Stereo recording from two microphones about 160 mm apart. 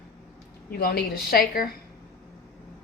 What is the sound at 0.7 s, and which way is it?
A woman's voice, 75° left (ahead or behind).